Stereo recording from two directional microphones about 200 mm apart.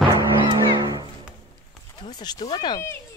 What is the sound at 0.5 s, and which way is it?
Music, 20° right (ahead or behind).